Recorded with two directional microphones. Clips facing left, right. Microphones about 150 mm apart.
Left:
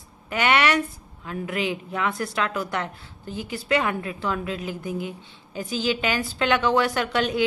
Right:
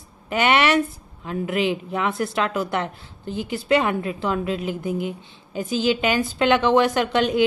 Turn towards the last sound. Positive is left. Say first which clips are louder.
# right 4 dB
turn(degrees=-20)  # may be behind; listen again after turning